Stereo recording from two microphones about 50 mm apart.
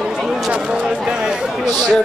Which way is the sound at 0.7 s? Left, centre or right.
Centre.